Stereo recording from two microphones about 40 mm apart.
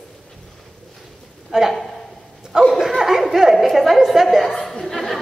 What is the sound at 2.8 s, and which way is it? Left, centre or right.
A woman's voice, centre.